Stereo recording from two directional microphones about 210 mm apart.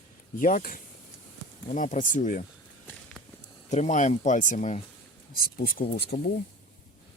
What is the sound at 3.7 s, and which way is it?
Speech, 35° left (ahead or behind).